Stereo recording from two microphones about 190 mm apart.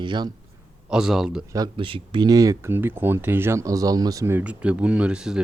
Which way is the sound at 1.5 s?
25° right (ahead or behind).